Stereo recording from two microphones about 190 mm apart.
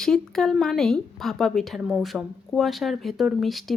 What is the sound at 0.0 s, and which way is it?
Speech, centre (ahead or behind).